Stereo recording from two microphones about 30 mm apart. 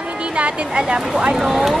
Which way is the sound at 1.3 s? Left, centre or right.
Centre.